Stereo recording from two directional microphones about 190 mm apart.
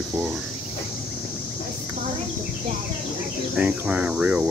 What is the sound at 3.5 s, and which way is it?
Speech, 5° right (ahead or behind).